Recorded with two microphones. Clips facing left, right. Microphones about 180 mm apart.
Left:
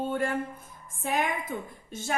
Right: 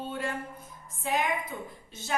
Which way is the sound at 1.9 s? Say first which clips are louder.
Left 7 dB; 50° left (ahead or behind).